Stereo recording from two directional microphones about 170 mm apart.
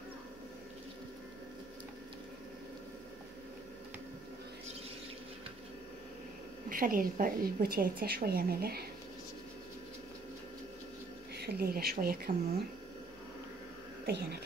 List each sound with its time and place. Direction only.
6.7 s a woman's voice: 55° right (ahead or behind)
11.3 s a woman's voice: 65° right (ahead or behind)
14.0 s speech: 75° right (ahead or behind)